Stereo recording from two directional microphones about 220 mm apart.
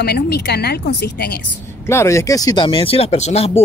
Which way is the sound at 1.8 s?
10° left (ahead or behind).